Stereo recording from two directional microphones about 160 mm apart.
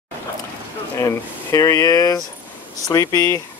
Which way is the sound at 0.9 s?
20° left (ahead or behind).